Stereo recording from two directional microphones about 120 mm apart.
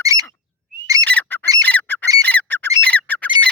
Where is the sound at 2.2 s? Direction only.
15° left (ahead or behind).